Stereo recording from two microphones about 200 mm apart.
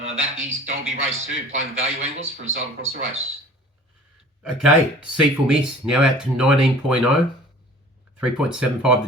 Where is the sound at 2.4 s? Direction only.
80° right.